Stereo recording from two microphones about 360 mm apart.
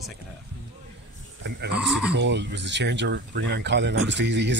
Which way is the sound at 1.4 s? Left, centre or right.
Right.